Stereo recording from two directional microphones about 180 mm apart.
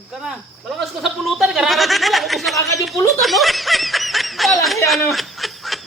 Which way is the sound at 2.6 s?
20° left (ahead or behind).